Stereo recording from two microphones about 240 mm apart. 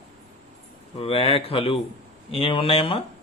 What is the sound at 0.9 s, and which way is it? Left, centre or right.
Speech, left.